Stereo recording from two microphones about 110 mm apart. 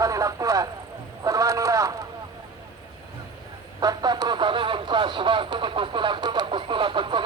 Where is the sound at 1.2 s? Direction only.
30° right (ahead or behind).